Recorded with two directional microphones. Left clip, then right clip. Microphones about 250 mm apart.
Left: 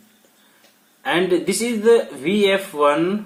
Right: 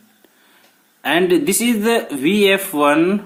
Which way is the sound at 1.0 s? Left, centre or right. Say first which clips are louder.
Right 3 dB; right.